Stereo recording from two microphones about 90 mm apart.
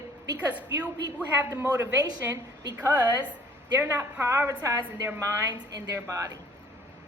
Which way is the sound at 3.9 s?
20° right (ahead or behind).